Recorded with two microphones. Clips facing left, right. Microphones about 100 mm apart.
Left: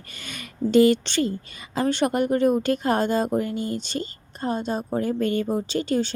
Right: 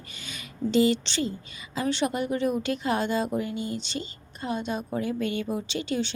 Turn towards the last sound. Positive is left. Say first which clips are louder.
# left 5 dB
turn(degrees=45)  # may be behind; listen again after turning